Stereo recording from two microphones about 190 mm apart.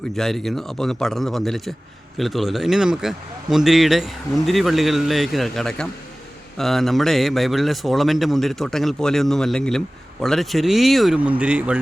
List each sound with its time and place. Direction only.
0.2 s a man's voice: centre (ahead or behind)